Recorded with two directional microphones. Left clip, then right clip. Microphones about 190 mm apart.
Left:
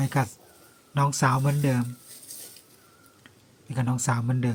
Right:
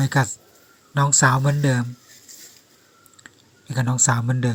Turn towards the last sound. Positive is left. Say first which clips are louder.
# right 6 dB
turn(degrees=-20)  # may be behind; listen again after turning